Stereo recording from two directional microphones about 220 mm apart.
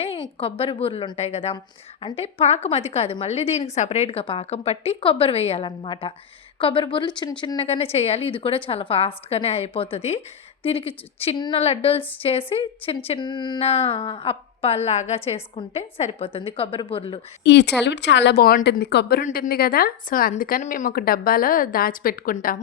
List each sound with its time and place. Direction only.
0.3 s a woman's voice: 25° left (ahead or behind)
17.4 s a woman's voice: 50° left (ahead or behind)